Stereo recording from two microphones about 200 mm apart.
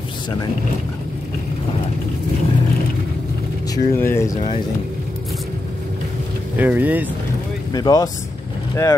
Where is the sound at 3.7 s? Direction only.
15° left (ahead or behind).